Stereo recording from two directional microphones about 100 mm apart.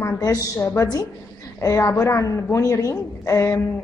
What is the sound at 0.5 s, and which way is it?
A woman's voice, 30° left (ahead or behind).